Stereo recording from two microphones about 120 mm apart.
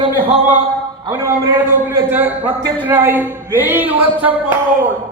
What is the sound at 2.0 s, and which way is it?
A man's voice, 15° right (ahead or behind).